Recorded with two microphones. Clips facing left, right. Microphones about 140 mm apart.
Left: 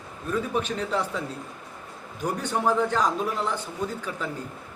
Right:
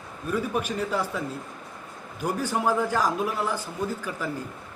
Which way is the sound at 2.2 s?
10° right (ahead or behind).